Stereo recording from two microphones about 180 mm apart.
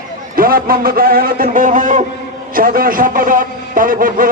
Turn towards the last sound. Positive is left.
turn(degrees=-50)  # may be behind; listen again after turning